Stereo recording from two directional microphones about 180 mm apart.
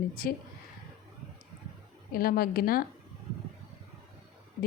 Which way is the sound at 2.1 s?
55° left (ahead or behind).